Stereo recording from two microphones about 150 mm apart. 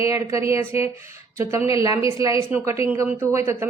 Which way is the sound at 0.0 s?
20° right (ahead or behind).